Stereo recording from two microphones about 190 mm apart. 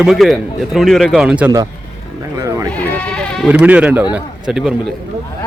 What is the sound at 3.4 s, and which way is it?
A man's voice, 5° right (ahead or behind).